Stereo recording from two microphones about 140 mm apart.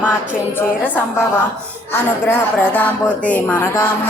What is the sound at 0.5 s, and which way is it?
Speech, 15° left (ahead or behind).